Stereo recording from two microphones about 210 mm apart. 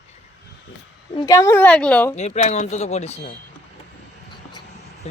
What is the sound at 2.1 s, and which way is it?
Speech, 30° left (ahead or behind).